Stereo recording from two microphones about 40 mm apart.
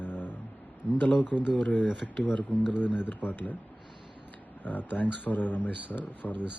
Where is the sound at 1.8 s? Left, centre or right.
Centre.